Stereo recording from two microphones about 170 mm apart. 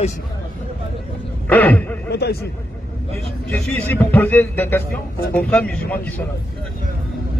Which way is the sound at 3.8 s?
10° left (ahead or behind).